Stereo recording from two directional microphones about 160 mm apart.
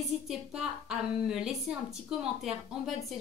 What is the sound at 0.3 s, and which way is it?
A woman's voice, 5° right (ahead or behind).